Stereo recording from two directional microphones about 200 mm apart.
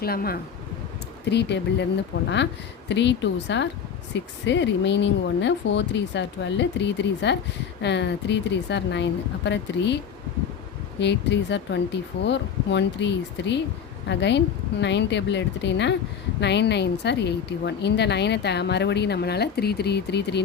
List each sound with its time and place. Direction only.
0.0 s a woman's voice: 50° left (ahead or behind)
2.9 s a woman's voice: 60° left (ahead or behind)
11.0 s a woman's voice: 60° left (ahead or behind)